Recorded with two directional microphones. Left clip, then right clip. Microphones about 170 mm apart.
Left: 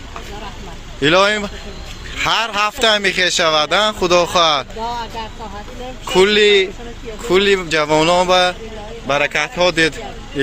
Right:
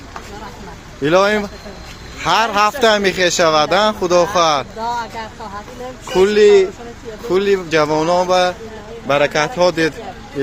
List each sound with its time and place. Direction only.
1.0 s speech: 5° right (ahead or behind)
4.9 s speech: 10° left (ahead or behind)
9.0 s a man's voice: 15° right (ahead or behind)